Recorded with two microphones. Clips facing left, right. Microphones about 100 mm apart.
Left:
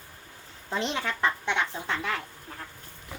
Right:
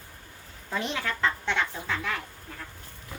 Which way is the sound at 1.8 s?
30° left (ahead or behind).